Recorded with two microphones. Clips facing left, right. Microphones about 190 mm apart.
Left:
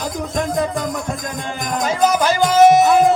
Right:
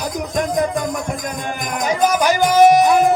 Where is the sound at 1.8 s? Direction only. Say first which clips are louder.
Even; 15° right (ahead or behind).